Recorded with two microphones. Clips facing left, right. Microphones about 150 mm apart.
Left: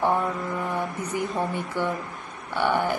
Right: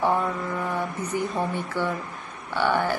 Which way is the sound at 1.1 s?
15° left (ahead or behind).